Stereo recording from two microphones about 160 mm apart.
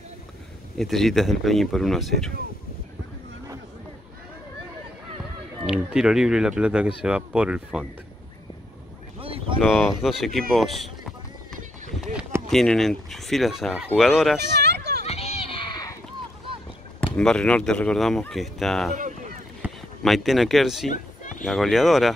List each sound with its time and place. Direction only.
0.7 s speech: centre (ahead or behind)
5.7 s speech: 5° right (ahead or behind)
9.2 s boat: 35° right (ahead or behind)
9.6 s speech: centre (ahead or behind)
12.4 s speech: centre (ahead or behind)
14.6 s a sound: 90° right
15.0 s children playing: 40° left (ahead or behind); by 16.0 s 25° left (ahead or behind)
17.0 s speech: 5° left (ahead or behind)
18.9 s boat: 50° right (ahead or behind)
19.6 s a sound: 10° right (ahead or behind)
20.0 s speech: centre (ahead or behind)